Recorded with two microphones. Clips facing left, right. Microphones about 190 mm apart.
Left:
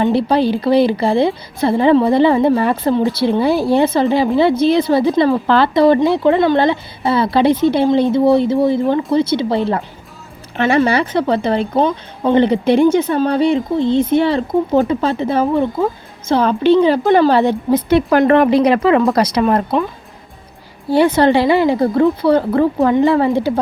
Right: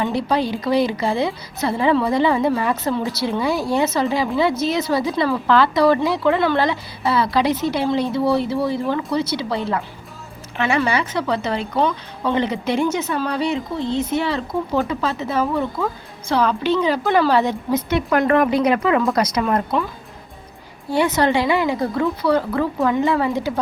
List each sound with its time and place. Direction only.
0.0 s a woman's voice: 30° left (ahead or behind)
13.9 s speech: 55° left (ahead or behind)
14.2 s a woman's voice: 30° left (ahead or behind)
20.9 s a woman's voice: 30° left (ahead or behind)